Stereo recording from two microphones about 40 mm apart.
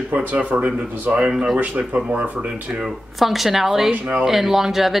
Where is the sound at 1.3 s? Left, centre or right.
Centre.